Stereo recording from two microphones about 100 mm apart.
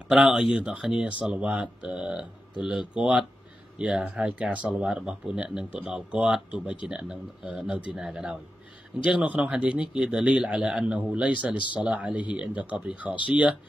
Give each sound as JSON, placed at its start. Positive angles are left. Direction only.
{"t": 0.1, "sound": "speech", "side_deg": -5}
{"t": 11.5, "sound": "speech", "side_deg": 55}
{"t": 11.8, "sound": "speech", "side_deg": -10}